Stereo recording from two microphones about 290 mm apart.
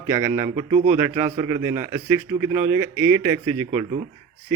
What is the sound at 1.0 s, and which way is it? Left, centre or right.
A man's voice, centre.